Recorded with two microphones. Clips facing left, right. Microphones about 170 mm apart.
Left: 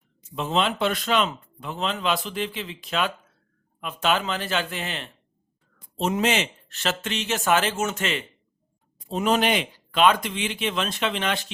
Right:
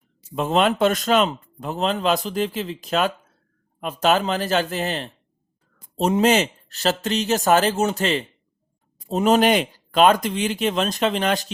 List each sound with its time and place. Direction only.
0.3 s speech: 50° right (ahead or behind)